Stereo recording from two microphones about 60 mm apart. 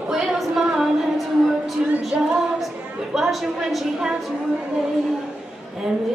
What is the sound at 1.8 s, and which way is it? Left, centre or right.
Music, centre.